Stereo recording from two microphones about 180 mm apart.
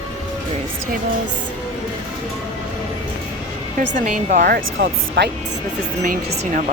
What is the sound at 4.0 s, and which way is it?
Speech, 45° right (ahead or behind).